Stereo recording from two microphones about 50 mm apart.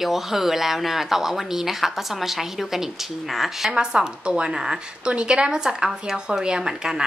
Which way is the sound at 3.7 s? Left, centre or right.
Centre.